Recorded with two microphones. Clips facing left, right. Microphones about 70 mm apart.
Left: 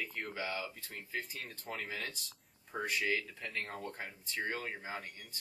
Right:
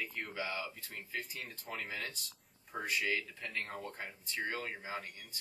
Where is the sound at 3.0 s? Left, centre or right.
Centre.